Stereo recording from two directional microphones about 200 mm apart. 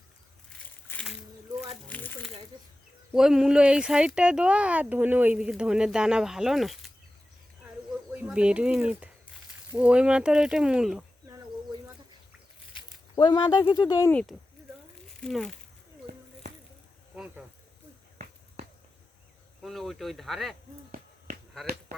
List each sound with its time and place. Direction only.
0.9 s a sound: 5° left (ahead or behind)
1.9 s crumpling: 10° left (ahead or behind)
3.1 s speech: centre (ahead or behind)
8.1 s speech: 5° right (ahead or behind)
13.1 s speech: 20° left (ahead or behind)
14.1 s speech: 5° left (ahead or behind)
19.6 s speech: centre (ahead or behind)